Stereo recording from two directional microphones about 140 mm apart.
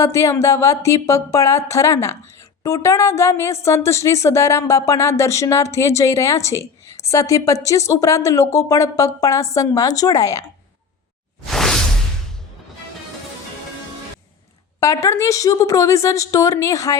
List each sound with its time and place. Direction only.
0.0 s a woman's voice: 20° left (ahead or behind)
11.4 s whoosh: 5° left (ahead or behind)
14.8 s a woman's voice: 20° left (ahead or behind)